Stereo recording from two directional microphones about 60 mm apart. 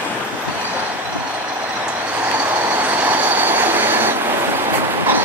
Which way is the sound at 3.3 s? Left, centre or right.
Right.